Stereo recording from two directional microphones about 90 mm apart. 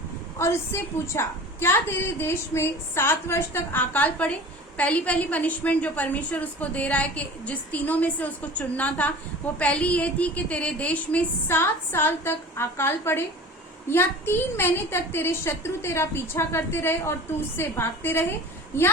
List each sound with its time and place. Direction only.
0.3 s a woman's voice: 30° left (ahead or behind)
11.4 s a woman's voice: 25° left (ahead or behind)